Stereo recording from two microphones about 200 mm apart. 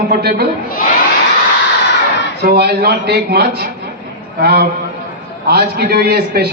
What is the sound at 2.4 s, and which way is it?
A man's voice, 55° right (ahead or behind).